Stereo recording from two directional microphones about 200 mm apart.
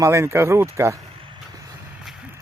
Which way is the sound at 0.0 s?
15° right (ahead or behind).